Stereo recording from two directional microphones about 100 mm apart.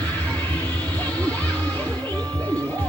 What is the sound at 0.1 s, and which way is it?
Music, 15° left (ahead or behind).